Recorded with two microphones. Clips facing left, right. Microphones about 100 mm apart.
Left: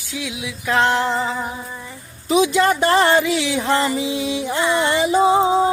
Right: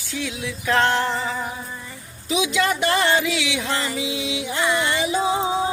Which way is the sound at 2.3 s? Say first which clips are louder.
Left 6 dB; 40° left (ahead or behind).